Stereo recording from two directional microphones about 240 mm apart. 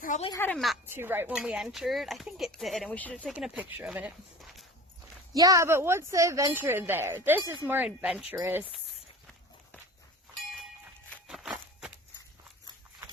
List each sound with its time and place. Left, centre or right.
0.0 s speech: left
0.3 s speech: centre
0.5 s speech: centre
5.3 s speech: centre
11.1 s a sound: centre